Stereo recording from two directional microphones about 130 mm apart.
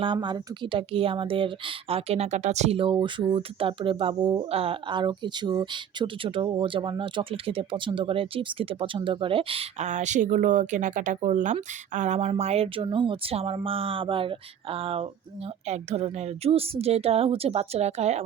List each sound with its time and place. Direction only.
0.0 s speech: 35° right (ahead or behind)
9.8 s speech: 65° right (ahead or behind)
12.3 s a woman's voice: 55° right (ahead or behind)
15.6 s a woman's voice: 55° right (ahead or behind)